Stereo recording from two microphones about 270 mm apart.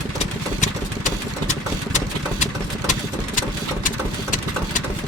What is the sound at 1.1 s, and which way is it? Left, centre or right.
Engine, left.